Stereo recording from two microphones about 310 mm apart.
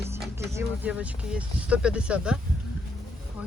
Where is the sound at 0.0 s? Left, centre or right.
Centre.